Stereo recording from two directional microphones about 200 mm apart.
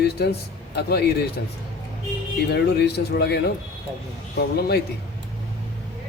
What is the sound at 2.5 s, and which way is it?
Speech, 55° left (ahead or behind).